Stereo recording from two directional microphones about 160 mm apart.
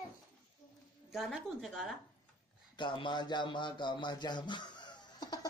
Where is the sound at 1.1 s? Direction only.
Centre (ahead or behind).